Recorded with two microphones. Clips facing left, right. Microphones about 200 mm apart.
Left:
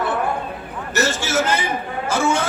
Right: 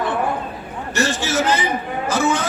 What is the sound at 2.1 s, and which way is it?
Speech, 25° left (ahead or behind).